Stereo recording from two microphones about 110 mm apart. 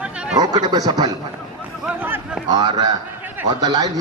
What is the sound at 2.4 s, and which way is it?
Speech, 40° right (ahead or behind).